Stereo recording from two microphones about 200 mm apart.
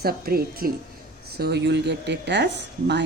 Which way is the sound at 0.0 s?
50° right (ahead or behind).